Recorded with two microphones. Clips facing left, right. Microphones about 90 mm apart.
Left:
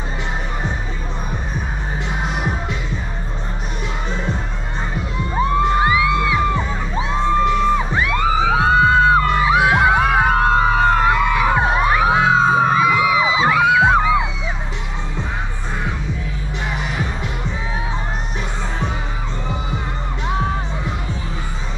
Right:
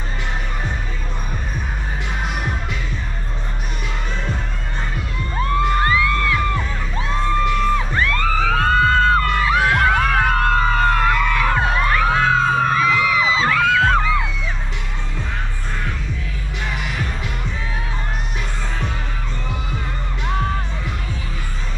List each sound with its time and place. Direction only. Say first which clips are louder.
5.3 s music: left 3 dB; 15° left (ahead or behind)
16.8 s music: left 2 dB; 15° left (ahead or behind)
20.2 s music: left 1 dB; 5° left (ahead or behind)